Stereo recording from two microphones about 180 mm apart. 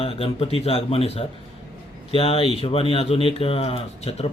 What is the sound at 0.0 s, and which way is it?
Speech, 30° left (ahead or behind).